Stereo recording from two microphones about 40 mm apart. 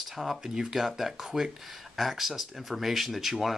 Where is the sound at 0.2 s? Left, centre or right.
Centre.